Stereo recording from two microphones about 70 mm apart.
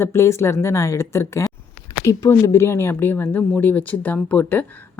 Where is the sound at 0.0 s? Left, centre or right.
Left.